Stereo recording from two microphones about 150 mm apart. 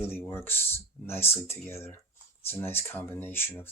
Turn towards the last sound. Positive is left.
turn(degrees=15)  # may be behind; listen again after turning